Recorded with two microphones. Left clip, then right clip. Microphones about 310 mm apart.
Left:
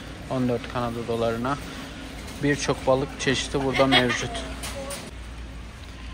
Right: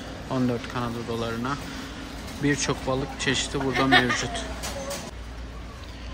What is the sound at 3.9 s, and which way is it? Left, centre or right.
Speech, right.